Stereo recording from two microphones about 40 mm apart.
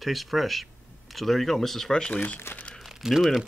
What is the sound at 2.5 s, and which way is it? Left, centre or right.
Speech, left.